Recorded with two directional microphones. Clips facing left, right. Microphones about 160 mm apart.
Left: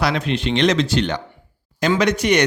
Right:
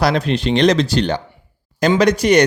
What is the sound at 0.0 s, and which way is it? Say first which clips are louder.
Speech: right 4 dB; 35° right (ahead or behind).